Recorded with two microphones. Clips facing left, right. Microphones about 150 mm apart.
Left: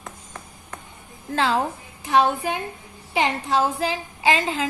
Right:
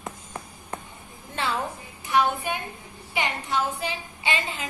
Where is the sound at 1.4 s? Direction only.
90° left.